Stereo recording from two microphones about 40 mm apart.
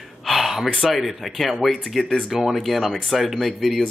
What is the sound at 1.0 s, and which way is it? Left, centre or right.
Speech, centre.